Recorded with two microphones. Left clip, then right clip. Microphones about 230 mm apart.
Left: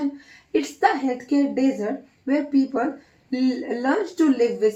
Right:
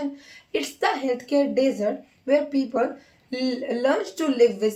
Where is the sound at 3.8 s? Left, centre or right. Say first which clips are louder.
Left 1 dB; right.